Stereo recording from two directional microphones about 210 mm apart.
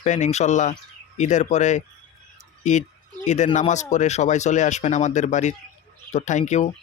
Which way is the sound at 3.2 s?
35° left (ahead or behind).